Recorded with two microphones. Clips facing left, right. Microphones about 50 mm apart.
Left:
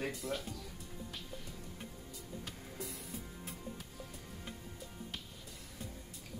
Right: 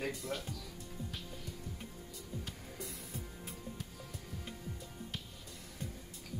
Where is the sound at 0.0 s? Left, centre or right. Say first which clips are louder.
Even; centre.